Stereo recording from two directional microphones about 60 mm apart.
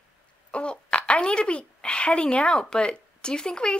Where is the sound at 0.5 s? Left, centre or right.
Centre.